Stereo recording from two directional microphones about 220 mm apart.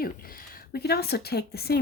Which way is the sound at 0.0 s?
40° left (ahead or behind).